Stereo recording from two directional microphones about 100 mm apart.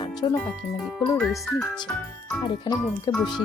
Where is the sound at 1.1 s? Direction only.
Centre (ahead or behind).